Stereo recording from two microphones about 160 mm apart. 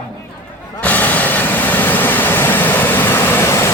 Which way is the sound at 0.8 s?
10° left (ahead or behind).